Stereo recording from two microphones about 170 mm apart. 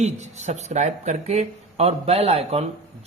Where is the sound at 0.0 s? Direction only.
40° right (ahead or behind).